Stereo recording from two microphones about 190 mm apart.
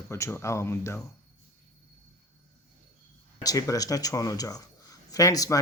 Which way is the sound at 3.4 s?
20° left (ahead or behind).